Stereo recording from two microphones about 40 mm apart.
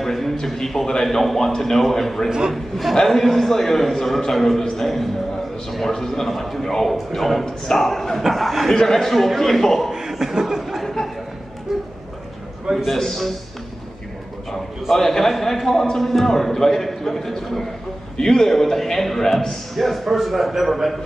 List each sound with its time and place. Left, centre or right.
0.0 s a man's voice: centre
2.2 s a man's voice: centre
2.5 s a man's voice: centre
9.9 s chuckle: centre
11.7 s a sound: centre
12.7 s a man's voice: centre
14.9 s a man's voice: centre